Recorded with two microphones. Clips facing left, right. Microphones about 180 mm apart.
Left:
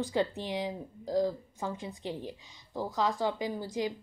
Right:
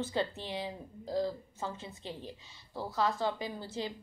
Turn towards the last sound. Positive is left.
turn(degrees=15)  # may be behind; listen again after turning